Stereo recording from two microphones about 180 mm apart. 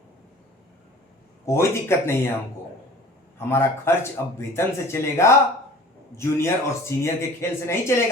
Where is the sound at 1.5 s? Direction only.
15° left (ahead or behind).